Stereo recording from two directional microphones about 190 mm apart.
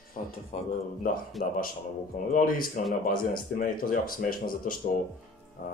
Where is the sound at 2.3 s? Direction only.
45° left (ahead or behind).